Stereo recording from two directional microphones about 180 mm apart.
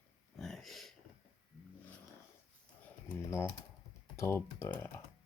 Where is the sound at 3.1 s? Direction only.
15° left (ahead or behind).